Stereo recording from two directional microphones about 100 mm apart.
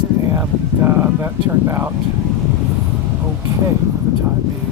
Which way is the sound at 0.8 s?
25° right (ahead or behind).